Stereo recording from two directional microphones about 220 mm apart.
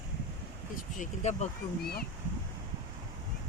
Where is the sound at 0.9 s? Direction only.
30° left (ahead or behind).